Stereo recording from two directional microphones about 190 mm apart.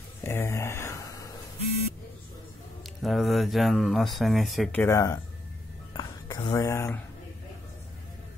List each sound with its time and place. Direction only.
0.2 s a sound: 10° left (ahead or behind)
2.8 s speech: centre (ahead or behind)
4.8 s speech: 15° left (ahead or behind)